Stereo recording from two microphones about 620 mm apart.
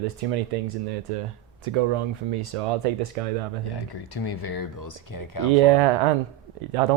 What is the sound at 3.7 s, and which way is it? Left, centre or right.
Speech, left.